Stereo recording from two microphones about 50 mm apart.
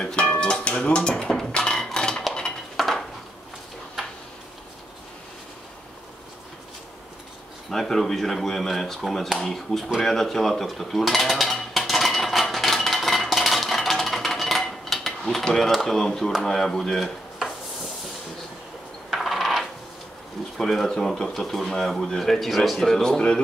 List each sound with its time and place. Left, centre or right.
0.0 s music: centre
2.0 s a sound: centre
2.8 s a sound: centre
7.7 s speech: centre
10.0 s dishes: centre
15.7 s speech: centre
19.0 s coin: centre
20.5 s speech: centre